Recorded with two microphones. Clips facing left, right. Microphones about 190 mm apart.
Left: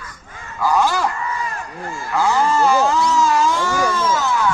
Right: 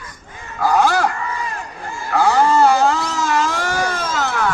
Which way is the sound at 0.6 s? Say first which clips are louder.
Right 2 dB; 65° right (ahead or behind).